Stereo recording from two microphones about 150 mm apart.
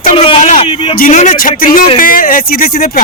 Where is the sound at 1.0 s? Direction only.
60° left (ahead or behind); by 2.8 s 85° left.